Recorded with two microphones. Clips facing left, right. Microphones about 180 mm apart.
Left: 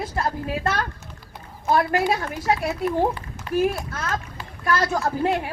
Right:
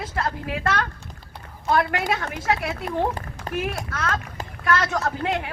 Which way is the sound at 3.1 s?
40° right (ahead or behind).